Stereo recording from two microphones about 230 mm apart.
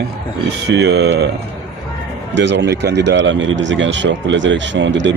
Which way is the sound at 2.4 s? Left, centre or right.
Right.